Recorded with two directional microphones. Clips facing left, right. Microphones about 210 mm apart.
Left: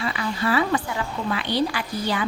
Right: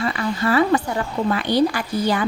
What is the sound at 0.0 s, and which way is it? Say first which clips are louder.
A woman's voice: right 4 dB; 45° right (ahead or behind).